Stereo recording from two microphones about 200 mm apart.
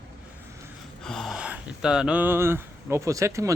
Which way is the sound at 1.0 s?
Centre (ahead or behind).